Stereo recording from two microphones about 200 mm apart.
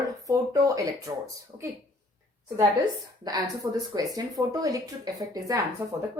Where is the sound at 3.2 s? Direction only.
20° right (ahead or behind).